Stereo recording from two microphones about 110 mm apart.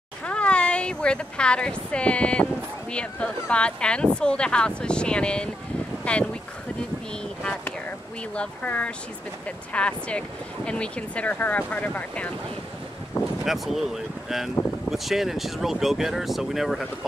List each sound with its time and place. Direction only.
0.2 s speech: 10° left (ahead or behind)
8.4 s speech: 10° left (ahead or behind)
13.2 s speech: 30° left (ahead or behind)
13.5 s speech: centre (ahead or behind)